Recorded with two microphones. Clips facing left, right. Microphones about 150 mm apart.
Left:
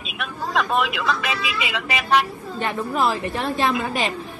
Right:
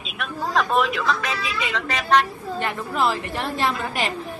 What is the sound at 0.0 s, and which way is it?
Speech, centre (ahead or behind).